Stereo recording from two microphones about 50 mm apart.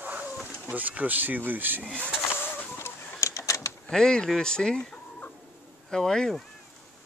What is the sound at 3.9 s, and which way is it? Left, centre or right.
Speech, centre.